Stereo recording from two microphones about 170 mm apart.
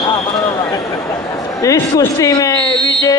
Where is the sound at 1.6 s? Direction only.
20° left (ahead or behind).